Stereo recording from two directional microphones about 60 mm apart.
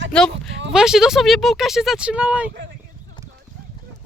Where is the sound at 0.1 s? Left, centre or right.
Centre.